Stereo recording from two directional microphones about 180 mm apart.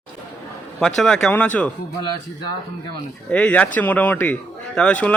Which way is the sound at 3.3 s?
5° left (ahead or behind).